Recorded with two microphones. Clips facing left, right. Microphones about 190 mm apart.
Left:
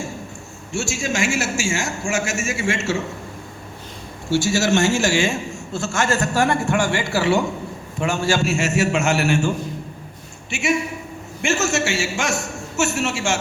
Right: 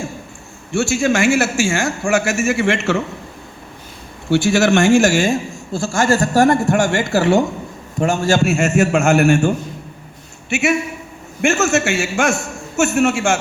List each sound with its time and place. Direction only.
0.7 s a man's voice: 60° right (ahead or behind)
4.3 s a man's voice: 60° right (ahead or behind); by 8.4 s 40° right (ahead or behind)
8.4 s a man's voice: 55° right (ahead or behind)
10.5 s a man's voice: 65° right (ahead or behind)